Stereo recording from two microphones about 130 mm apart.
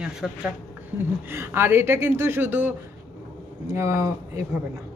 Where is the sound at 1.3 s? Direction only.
20° right (ahead or behind).